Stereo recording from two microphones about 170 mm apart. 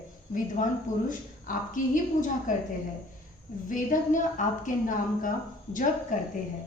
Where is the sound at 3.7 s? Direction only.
50° left (ahead or behind).